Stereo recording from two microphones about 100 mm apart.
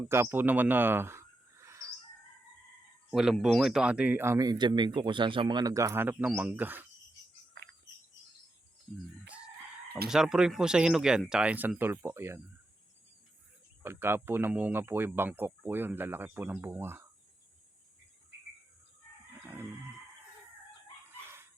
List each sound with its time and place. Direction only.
0.1 s speech: 25° right (ahead or behind)
3.1 s speech: 5° right (ahead or behind)
4.4 s speech: 45° right (ahead or behind)
5.7 s speech: 30° right (ahead or behind)
10.1 s speech: 5° right (ahead or behind); by 12.4 s 25° right (ahead or behind)
13.8 s speech: 25° right (ahead or behind)